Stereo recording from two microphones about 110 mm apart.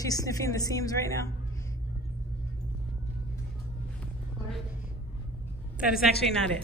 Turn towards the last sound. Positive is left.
turn(degrees=-5)  # may be behind; listen again after turning